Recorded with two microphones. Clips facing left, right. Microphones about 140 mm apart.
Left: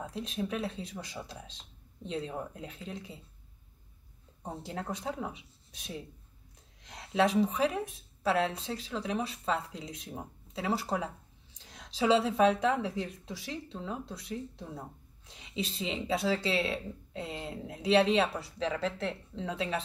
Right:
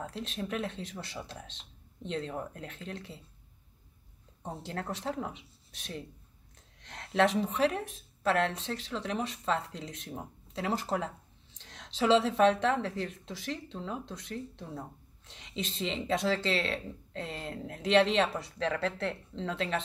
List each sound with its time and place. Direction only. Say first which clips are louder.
0.0 s a woman's voice: left 2 dB; 10° left (ahead or behind)
4.6 s a woman's voice: right 1 dB; 10° left (ahead or behind)